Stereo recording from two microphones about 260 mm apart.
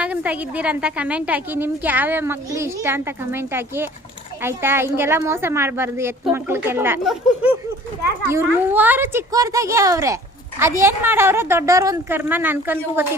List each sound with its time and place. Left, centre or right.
0.0 s a woman's voice: centre